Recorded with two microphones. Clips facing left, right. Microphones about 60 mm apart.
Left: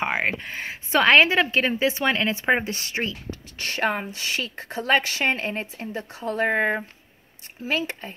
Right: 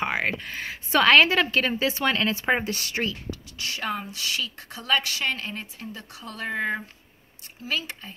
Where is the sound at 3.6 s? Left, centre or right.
Left.